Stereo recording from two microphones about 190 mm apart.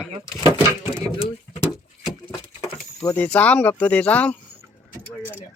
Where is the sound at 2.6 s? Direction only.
15° left (ahead or behind).